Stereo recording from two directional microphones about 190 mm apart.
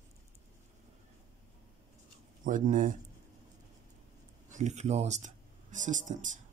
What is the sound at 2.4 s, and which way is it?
Speech, 45° right (ahead or behind).